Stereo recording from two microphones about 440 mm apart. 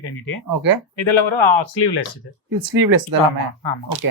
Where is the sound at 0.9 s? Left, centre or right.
Left.